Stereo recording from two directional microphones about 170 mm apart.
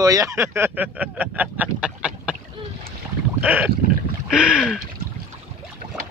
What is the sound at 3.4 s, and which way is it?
Boat, 10° right (ahead or behind).